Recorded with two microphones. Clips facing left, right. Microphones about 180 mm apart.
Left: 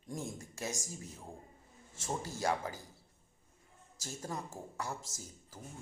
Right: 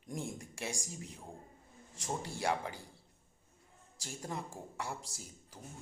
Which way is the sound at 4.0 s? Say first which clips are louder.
Even; 15° right (ahead or behind).